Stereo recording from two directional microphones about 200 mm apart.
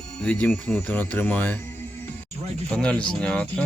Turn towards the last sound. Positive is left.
turn(degrees=5)  # may be behind; listen again after turning